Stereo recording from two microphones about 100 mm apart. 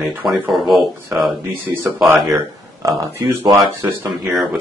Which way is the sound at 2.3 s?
30° right (ahead or behind).